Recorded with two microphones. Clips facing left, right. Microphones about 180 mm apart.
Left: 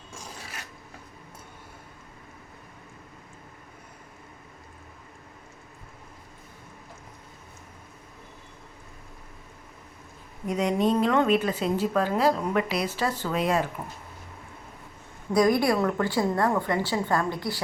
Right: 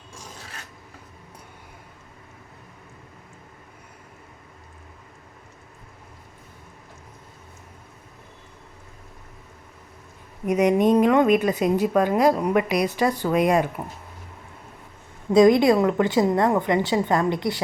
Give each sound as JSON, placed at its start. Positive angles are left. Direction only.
{"t": 10.4, "sound": "a woman's voice", "side_deg": -20}
{"t": 15.3, "sound": "a woman's voice", "side_deg": -20}